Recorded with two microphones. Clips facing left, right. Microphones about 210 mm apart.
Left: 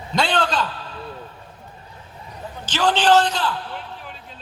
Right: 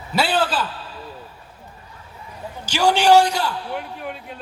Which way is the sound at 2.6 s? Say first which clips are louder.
Right 2 dB; 10° right (ahead or behind).